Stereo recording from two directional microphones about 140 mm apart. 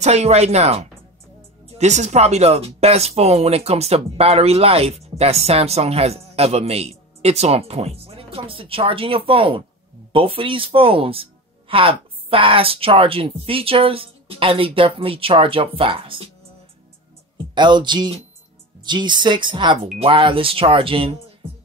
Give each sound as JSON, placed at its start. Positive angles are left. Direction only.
{"t": 0.0, "sound": "speech", "side_deg": -50}
{"t": 17.6, "sound": "speech", "side_deg": -35}